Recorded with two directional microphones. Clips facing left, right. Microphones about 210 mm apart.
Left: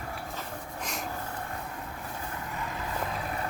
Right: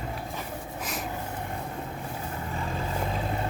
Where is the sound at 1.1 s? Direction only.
15° right (ahead or behind).